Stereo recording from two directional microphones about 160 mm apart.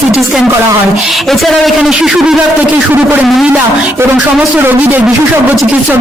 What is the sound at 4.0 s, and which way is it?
A man's voice, 15° right (ahead or behind).